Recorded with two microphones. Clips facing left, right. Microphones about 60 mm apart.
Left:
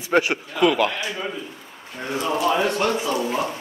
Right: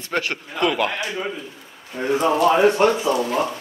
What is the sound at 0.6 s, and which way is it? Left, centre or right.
Speech, centre.